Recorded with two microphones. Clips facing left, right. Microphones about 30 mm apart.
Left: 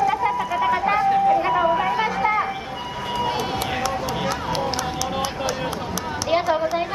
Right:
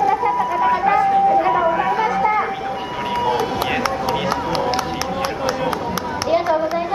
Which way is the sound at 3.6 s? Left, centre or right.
Right.